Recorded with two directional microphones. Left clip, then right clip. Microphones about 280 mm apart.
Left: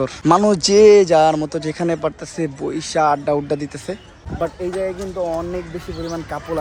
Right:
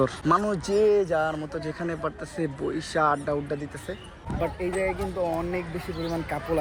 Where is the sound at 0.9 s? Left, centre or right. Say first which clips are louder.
Left 12 dB; left.